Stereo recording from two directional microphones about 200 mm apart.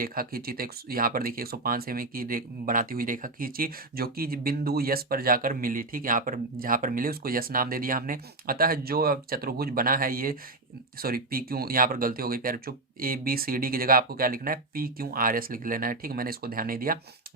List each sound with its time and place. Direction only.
0.0 s speech: 45° right (ahead or behind)